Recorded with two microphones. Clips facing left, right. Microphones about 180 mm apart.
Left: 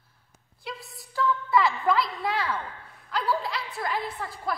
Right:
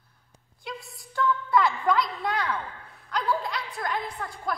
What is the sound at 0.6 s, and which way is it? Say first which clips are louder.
A woman's voice: even; centre (ahead or behind).